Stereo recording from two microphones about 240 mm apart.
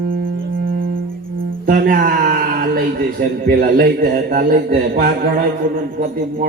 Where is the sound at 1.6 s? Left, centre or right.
Right.